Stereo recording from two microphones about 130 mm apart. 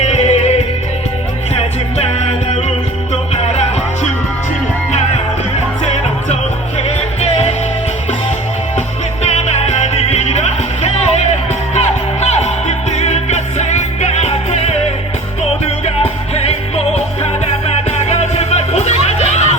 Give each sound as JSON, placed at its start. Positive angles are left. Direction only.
{"t": 0.0, "sound": "music", "side_deg": 60}
{"t": 6.7, "sound": "music", "side_deg": 55}
{"t": 9.2, "sound": "music", "side_deg": 55}
{"t": 16.3, "sound": "music", "side_deg": 55}